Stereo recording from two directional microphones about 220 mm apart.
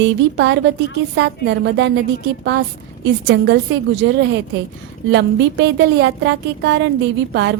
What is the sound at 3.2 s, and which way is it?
Speech, 50° right (ahead or behind).